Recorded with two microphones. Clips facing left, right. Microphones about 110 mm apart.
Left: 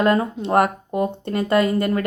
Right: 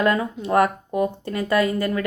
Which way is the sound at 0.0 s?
30° left (ahead or behind).